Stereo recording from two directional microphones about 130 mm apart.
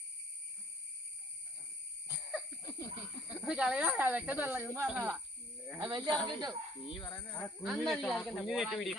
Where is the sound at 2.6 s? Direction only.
25° left (ahead or behind).